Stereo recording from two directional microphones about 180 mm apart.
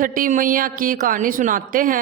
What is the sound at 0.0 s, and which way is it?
Speech, 50° right (ahead or behind).